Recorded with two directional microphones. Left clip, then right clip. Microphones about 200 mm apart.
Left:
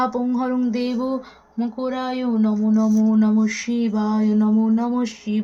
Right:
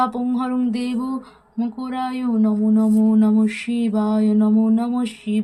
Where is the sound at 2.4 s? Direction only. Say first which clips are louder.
Right 3 dB; 30° right (ahead or behind).